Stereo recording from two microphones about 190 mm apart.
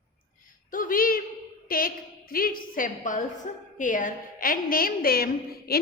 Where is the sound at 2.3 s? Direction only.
50° left (ahead or behind).